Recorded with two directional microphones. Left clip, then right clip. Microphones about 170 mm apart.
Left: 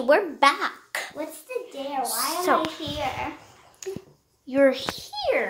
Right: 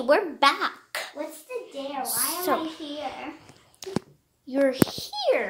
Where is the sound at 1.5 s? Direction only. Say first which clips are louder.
Left 4 dB; 30° left (ahead or behind).